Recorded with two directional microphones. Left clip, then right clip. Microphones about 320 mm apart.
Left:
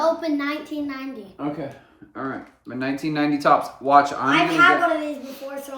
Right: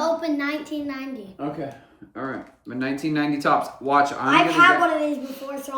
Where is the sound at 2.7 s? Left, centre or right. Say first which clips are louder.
Even; centre.